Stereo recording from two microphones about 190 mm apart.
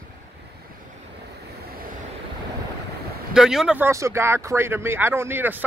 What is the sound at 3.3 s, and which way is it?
Speech, 5° right (ahead or behind).